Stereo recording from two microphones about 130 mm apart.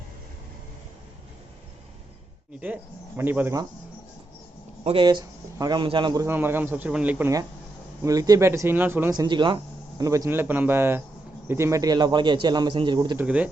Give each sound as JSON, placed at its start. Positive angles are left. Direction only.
{"t": 3.2, "sound": "speech", "side_deg": -15}
{"t": 4.8, "sound": "speech", "side_deg": -50}
{"t": 5.0, "sound": "a man's voice", "side_deg": -30}
{"t": 6.2, "sound": "speech", "side_deg": -15}
{"t": 8.0, "sound": "speech", "side_deg": -25}
{"t": 9.1, "sound": "a man's voice", "side_deg": -35}
{"t": 10.0, "sound": "a man's voice", "side_deg": -25}
{"t": 13.1, "sound": "speech", "side_deg": -10}